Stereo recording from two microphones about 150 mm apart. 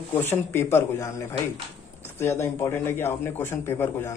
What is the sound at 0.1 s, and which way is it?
Speech, 15° left (ahead or behind).